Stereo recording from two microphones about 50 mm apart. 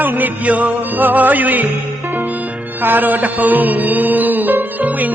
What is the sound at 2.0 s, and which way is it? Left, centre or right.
Music, right.